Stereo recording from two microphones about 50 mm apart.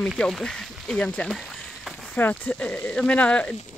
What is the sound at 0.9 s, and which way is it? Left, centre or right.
Speech, left.